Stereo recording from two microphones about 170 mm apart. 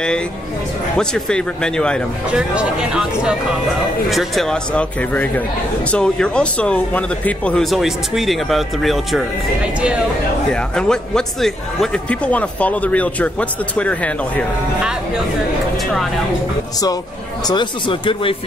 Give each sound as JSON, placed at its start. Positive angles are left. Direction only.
{"t": 0.9, "sound": "speech", "side_deg": 5}
{"t": 2.3, "sound": "speech", "side_deg": -5}
{"t": 10.5, "sound": "speech", "side_deg": 5}
{"t": 15.8, "sound": "speech", "side_deg": 0}
{"t": 17.5, "sound": "speech", "side_deg": 25}